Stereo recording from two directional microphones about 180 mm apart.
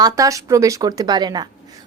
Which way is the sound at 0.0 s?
20° right (ahead or behind).